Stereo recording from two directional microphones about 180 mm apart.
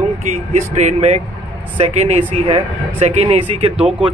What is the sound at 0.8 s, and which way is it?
Speech, 40° right (ahead or behind).